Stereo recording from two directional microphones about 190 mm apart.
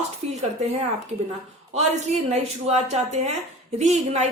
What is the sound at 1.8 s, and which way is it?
Speech, 35° right (ahead or behind).